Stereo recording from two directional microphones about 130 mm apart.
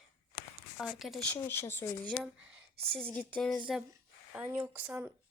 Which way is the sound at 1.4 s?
20° left (ahead or behind).